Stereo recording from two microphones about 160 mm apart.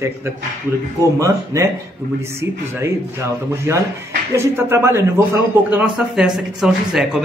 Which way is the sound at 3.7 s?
15° right (ahead or behind).